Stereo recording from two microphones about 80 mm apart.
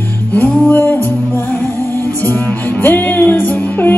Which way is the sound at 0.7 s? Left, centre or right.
Left.